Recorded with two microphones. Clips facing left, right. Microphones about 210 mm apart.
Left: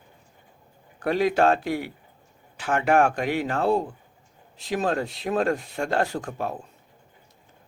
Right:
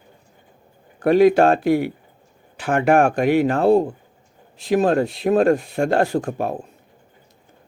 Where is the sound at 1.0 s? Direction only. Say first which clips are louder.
Right 7 dB; 55° right (ahead or behind).